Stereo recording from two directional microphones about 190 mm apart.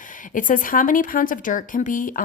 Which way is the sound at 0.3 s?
45° left (ahead or behind).